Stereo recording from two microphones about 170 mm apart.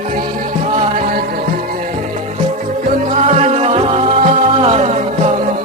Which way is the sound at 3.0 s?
40° right (ahead or behind).